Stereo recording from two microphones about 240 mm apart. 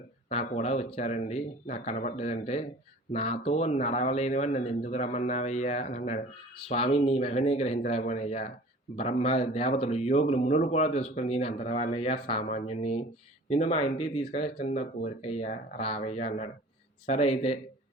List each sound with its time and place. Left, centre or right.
0.3 s speech: left